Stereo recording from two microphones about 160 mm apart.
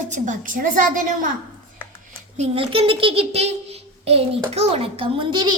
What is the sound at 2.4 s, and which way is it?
A child's voice, 35° right (ahead or behind).